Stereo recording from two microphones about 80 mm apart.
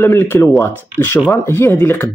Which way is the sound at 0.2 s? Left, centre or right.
Left.